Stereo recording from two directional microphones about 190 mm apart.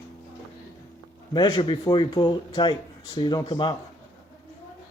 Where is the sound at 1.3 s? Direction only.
25° left (ahead or behind).